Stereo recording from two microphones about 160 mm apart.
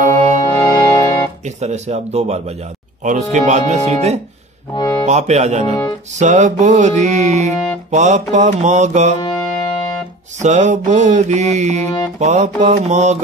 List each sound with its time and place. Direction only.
0.5 s music: 25° left (ahead or behind)
1.4 s music: 45° right (ahead or behind)
4.7 s speech: 20° left (ahead or behind)
5.0 s music: 45° right (ahead or behind)
9.2 s music: 25° left (ahead or behind)
10.4 s music: 45° right (ahead or behind)